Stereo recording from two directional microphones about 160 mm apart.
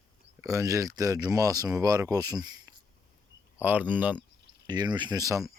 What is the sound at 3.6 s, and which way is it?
Speech, 10° right (ahead or behind).